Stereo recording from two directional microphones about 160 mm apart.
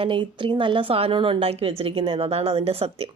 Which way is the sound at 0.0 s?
30° right (ahead or behind).